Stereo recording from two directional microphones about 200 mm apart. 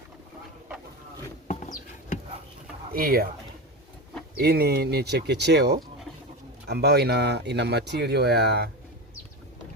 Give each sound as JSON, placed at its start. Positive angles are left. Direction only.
{"t": 1.5, "sound": "a sound", "side_deg": 40}
{"t": 2.9, "sound": "speech", "side_deg": -50}
{"t": 4.4, "sound": "speech", "side_deg": -55}